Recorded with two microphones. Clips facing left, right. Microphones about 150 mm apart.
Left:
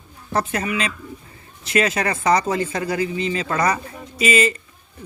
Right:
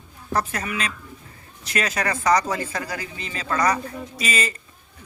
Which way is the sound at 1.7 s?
25° left (ahead or behind).